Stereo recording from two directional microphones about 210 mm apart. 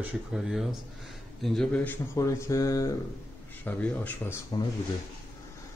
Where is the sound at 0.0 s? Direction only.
Centre (ahead or behind); by 4.6 s 15° left (ahead or behind).